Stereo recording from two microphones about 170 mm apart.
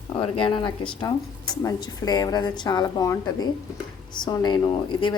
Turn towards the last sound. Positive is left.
turn(degrees=30)  # may be behind; listen again after turning